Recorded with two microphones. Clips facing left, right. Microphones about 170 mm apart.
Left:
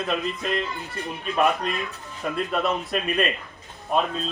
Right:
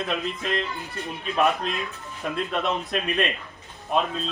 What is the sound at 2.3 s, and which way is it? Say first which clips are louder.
Speech: left 1 dB; centre (ahead or behind).